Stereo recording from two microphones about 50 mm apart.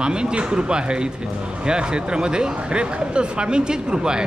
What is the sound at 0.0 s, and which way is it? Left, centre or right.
Speech, centre.